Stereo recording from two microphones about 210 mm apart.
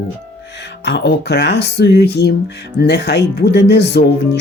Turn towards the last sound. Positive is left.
turn(degrees=50)  # may be behind; listen again after turning